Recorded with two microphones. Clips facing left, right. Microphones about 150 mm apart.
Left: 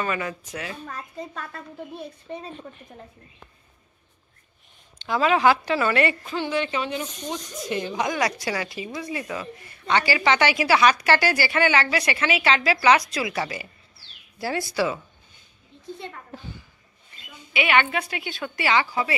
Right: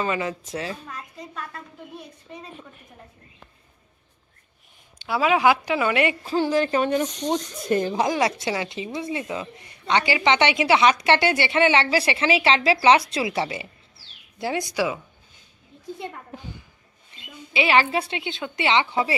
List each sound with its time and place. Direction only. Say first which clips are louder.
0.0 s a woman's voice: right 2 dB; 25° right (ahead or behind)
0.5 s speech: right 4 dB; 35° right (ahead or behind)
0.8 s a woman's voice: left 3 dB; 30° left (ahead or behind)
4.9 s a woman's voice: even; 10° right (ahead or behind)
6.2 s a woman's voice: right 5 dB; 40° right (ahead or behind)
7.9 s a woman's voice: right 3 dB; 30° right (ahead or behind); by 15.0 s 15° right (ahead or behind)
16.0 s a child's voice: right 3 dB; 15° right (ahead or behind)
17.2 s a woman's voice: right 2 dB; 30° right (ahead or behind)